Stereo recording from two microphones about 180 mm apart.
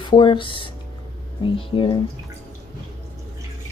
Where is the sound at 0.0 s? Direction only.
25° left (ahead or behind).